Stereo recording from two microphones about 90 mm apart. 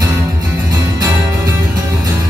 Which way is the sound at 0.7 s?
45° right (ahead or behind).